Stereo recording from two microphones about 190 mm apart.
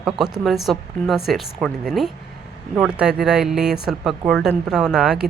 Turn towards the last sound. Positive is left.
turn(degrees=-5)  # may be behind; listen again after turning